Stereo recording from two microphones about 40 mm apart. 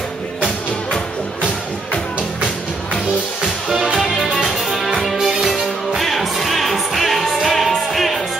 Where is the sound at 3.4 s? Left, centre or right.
Centre.